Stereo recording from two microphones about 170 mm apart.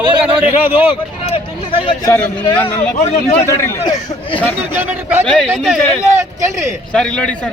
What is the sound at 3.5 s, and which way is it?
Speech, 20° left (ahead or behind).